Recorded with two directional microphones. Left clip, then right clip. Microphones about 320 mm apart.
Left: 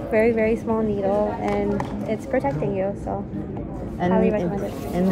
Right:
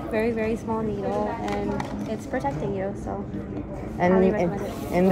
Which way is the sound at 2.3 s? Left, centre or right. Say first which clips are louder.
Left 4 dB; centre.